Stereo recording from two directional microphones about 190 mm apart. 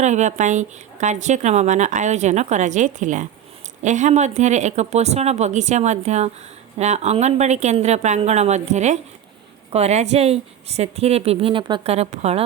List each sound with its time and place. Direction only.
0.0 s a woman's voice: 40° right (ahead or behind)